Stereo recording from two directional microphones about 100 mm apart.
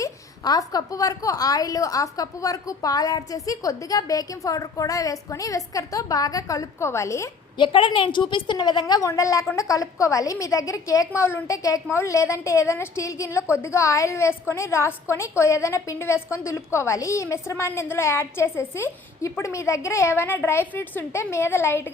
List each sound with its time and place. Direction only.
0.0 s a woman's voice: 40° left (ahead or behind)
7.6 s a woman's voice: 55° left (ahead or behind)
9.0 s a woman's voice: 30° left (ahead or behind)